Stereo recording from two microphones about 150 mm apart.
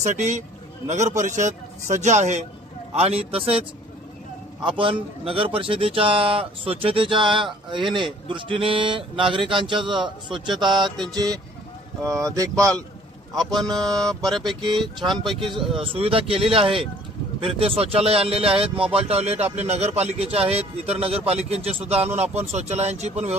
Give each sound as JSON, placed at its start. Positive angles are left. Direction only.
{"t": 0.0, "sound": "speech", "side_deg": -50}
{"t": 4.8, "sound": "speech", "side_deg": -35}
{"t": 13.7, "sound": "speech", "side_deg": -25}
{"t": 13.9, "sound": "speech", "side_deg": 5}
{"t": 14.6, "sound": "speech", "side_deg": -30}
{"t": 15.0, "sound": "speech", "side_deg": 0}
{"t": 15.8, "sound": "speech", "side_deg": -40}